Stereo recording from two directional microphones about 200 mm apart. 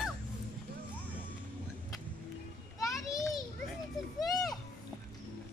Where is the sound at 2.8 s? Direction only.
15° left (ahead or behind).